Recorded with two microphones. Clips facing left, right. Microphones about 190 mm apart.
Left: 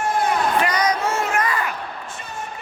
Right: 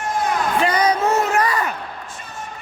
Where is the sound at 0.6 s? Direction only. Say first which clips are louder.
Right 3 dB; 30° right (ahead or behind).